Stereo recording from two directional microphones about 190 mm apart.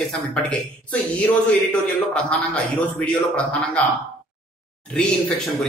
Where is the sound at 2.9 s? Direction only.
5° left (ahead or behind).